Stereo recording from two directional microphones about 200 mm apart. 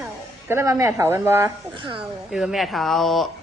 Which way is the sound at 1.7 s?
25° right (ahead or behind).